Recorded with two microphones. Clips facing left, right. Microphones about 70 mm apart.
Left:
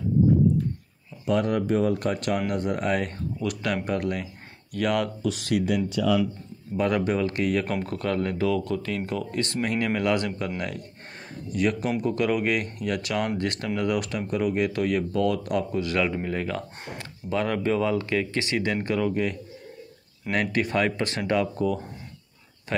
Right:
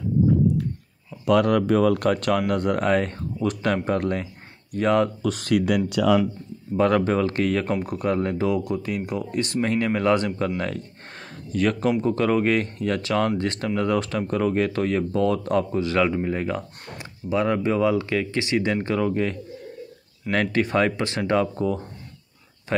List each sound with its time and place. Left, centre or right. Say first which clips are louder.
1.2 s speech: right 5 dB; right
5.2 s speech: right 3 dB; right
5.9 s speech: right 4 dB; right
7.0 s speech: right 3 dB; right
7.8 s speech: right 3 dB; centre
11.5 s speech: right 3 dB; right
12.0 s speech: right 3 dB; right